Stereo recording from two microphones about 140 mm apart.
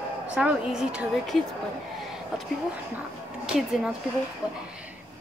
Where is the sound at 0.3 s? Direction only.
5° right (ahead or behind).